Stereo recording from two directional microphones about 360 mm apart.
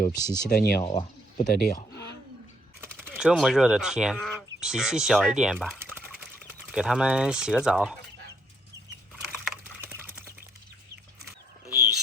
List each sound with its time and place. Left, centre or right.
0.3 s speech: centre
0.5 s speech: left
0.8 s speech: centre
1.5 s speech: left
2.8 s speech: centre
9.4 s typing: centre